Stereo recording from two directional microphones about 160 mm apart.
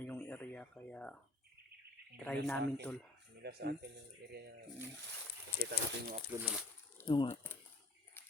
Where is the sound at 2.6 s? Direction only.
90° right.